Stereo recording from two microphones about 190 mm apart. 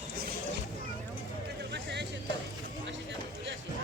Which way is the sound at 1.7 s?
65° right (ahead or behind).